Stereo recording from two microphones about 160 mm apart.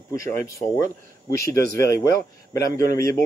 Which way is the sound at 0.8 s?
60° right (ahead or behind).